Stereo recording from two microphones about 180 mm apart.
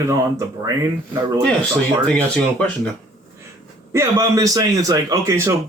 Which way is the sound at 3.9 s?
15° right (ahead or behind).